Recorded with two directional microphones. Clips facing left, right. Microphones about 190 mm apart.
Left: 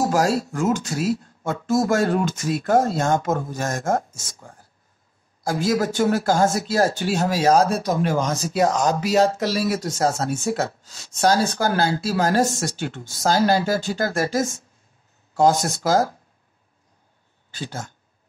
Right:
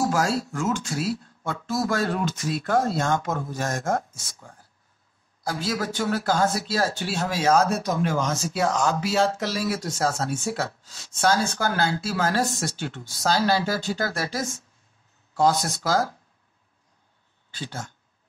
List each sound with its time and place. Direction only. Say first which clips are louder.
0.0 s speech: left 4 dB; 35° left (ahead or behind)
0.9 s speech: left 4 dB; 15° left (ahead or behind)
1.2 s a sound: left 5 dB; 45° left (ahead or behind)
2.6 s speech: left 4 dB; 45° left (ahead or behind)
17.5 s speech: left 3 dB; 45° left (ahead or behind)